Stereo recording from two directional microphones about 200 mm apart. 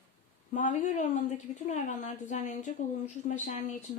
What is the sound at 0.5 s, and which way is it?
Speech, 40° left (ahead or behind).